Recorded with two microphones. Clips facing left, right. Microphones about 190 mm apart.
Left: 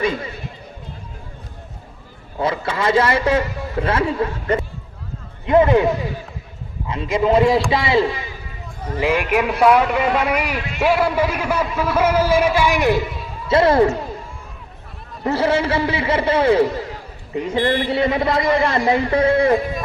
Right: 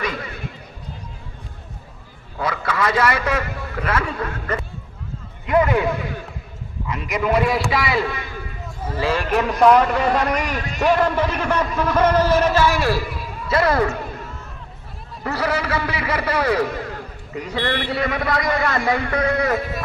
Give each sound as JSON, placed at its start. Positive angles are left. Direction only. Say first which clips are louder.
{"t": 2.4, "sound": "a man's voice", "louder": "left 2 dB", "side_deg": 25}
{"t": 9.0, "sound": "a man's voice", "louder": "left 2 dB", "side_deg": 15}
{"t": 15.2, "sound": "a man's voice", "louder": "left 5 dB", "side_deg": 25}